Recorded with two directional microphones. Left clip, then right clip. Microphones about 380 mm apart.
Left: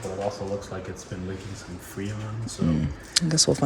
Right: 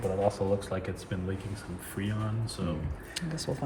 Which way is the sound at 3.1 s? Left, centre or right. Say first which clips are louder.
Left 14 dB; centre.